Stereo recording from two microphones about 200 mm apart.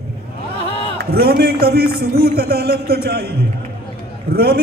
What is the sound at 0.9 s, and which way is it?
A man's voice, 50° right (ahead or behind).